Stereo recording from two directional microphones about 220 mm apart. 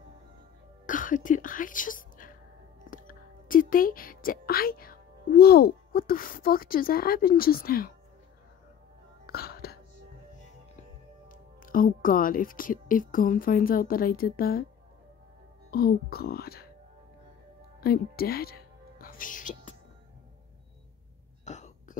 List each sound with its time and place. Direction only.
0.8 s a woman's voice: 35° left (ahead or behind)
9.2 s music: 45° left (ahead or behind)
11.2 s a woman's voice: 40° left (ahead or behind)
15.7 s speech: 45° left (ahead or behind)
17.7 s music: 45° left (ahead or behind)
21.5 s a sound: 30° left (ahead or behind)